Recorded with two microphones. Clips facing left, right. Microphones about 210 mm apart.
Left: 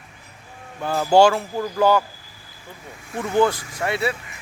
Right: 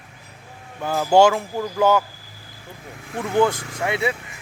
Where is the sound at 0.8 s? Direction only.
10° right (ahead or behind).